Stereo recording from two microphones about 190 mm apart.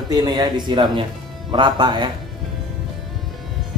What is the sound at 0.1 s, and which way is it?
Speech, 20° right (ahead or behind).